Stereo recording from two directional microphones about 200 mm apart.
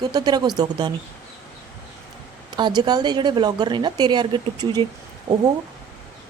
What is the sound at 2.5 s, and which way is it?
Speech, 20° right (ahead or behind).